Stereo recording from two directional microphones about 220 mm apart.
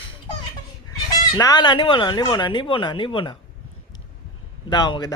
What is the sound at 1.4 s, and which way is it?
Speech, 15° left (ahead or behind).